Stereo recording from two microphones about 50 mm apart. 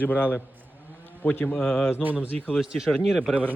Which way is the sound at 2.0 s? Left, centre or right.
Right.